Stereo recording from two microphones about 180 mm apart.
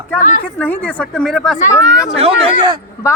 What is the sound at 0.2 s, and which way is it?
Speech, 45° left (ahead or behind).